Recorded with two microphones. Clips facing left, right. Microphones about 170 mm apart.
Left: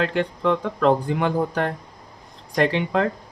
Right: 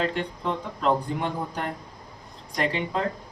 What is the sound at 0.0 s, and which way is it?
Speech, 90° left.